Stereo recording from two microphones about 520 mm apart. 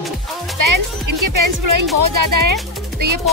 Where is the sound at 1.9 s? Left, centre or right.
Right.